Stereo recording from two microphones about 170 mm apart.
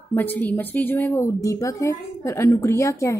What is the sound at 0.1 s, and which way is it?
A woman's voice, 10° left (ahead or behind).